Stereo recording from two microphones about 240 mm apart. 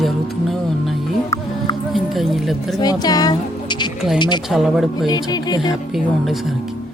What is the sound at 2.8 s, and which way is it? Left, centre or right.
Speech, centre.